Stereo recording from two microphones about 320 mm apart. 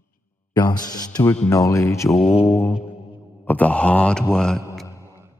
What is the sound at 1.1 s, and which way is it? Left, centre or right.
Speech, centre.